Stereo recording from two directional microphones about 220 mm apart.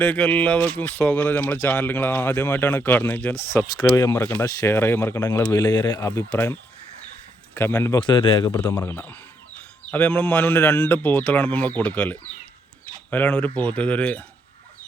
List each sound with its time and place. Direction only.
0.0 s speech: 5° left (ahead or behind)
6.0 s a man's voice: 5° left (ahead or behind)
8.7 s speech: 10° left (ahead or behind)